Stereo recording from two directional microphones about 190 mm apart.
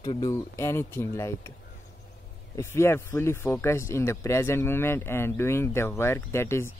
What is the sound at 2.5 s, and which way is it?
Speech, 15° left (ahead or behind).